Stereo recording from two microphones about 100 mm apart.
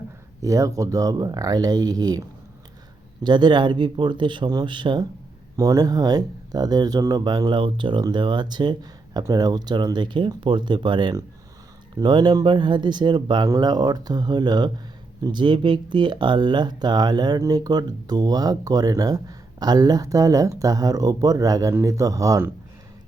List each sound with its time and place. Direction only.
0.4 s speech: 35° right (ahead or behind)
3.2 s speech: 50° right (ahead or behind)
5.5 s speech: 35° right (ahead or behind); by 13.5 s 50° right (ahead or behind)
13.5 s speech: 40° right (ahead or behind)